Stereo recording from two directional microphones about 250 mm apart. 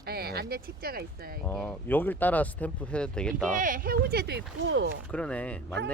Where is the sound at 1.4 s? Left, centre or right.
Centre.